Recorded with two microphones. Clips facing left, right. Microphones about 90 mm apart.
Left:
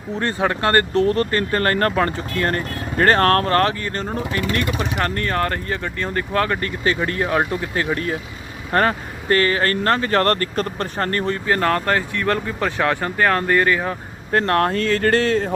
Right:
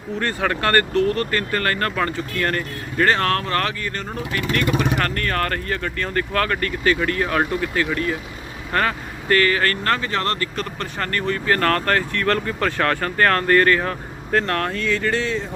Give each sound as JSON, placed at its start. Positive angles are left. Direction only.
{"t": 0.2, "sound": "speech", "side_deg": 25}
{"t": 3.1, "sound": "speech", "side_deg": 45}
{"t": 10.1, "sound": "speech", "side_deg": 45}
{"t": 11.4, "sound": "speech", "side_deg": 15}
{"t": 14.3, "sound": "speech", "side_deg": 35}